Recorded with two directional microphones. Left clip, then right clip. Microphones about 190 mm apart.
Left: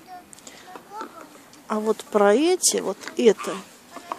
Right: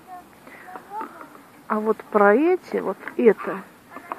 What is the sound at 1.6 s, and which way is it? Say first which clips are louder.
Speech: right 1 dB; 25° left (ahead or behind).